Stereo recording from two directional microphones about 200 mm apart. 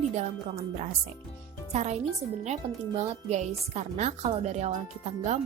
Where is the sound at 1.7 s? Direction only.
35° right (ahead or behind).